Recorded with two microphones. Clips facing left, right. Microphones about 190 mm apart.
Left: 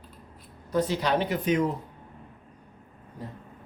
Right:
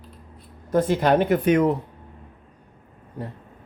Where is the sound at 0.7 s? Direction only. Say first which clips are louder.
Right 6 dB; 50° right (ahead or behind).